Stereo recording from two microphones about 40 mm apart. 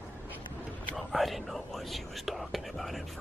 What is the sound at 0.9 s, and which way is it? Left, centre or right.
Speech, centre.